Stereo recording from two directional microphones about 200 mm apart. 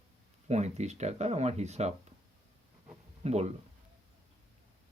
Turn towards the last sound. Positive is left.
turn(degrees=-35)  # may be behind; listen again after turning